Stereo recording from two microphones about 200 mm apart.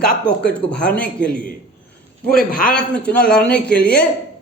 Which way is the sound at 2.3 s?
45° left (ahead or behind).